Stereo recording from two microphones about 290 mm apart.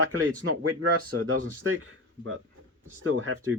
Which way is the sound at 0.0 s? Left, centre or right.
Right.